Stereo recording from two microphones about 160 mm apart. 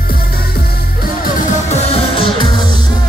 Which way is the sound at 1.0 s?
55° left (ahead or behind).